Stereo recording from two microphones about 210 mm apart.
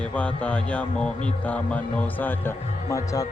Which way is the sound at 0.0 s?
5° left (ahead or behind).